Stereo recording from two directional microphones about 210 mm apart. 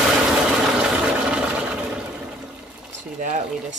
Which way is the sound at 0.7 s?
5° right (ahead or behind).